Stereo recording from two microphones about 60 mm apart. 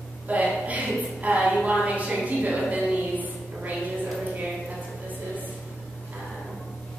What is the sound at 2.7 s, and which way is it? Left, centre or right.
Music, right.